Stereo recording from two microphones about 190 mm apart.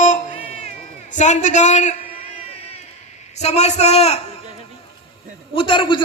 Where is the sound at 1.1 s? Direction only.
40° left (ahead or behind).